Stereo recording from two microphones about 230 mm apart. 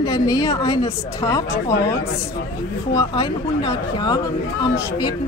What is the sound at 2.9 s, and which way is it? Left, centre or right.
Speech, centre.